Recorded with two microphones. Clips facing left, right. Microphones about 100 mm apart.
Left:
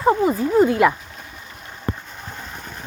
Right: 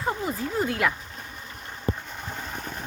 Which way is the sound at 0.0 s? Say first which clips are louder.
Left 11 dB; 90° left.